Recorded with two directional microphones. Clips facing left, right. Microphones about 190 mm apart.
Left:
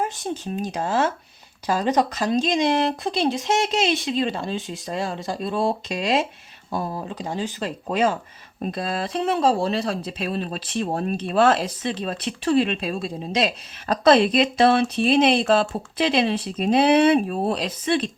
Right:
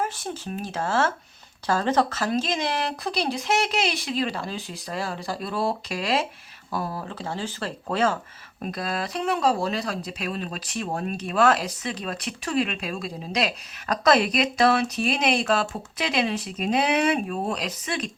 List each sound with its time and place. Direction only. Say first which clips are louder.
0.0 s speech: left 3 dB; 20° left (ahead or behind)
8.6 s speech: left 3 dB; 25° left (ahead or behind)